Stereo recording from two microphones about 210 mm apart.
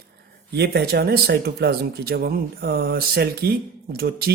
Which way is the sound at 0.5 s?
50° right (ahead or behind).